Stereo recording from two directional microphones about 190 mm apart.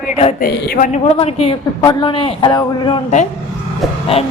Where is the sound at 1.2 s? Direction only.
30° left (ahead or behind).